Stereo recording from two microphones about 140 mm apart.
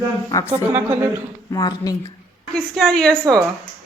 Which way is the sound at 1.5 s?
25° left (ahead or behind).